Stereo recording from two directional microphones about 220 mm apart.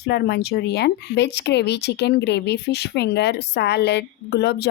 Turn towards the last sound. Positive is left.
turn(degrees=50)  # may be behind; listen again after turning